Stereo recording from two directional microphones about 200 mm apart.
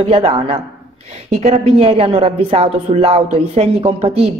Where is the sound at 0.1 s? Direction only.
30° right (ahead or behind).